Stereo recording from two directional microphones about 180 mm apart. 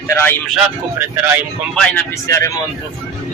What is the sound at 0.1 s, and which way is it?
Speech, 10° left (ahead or behind).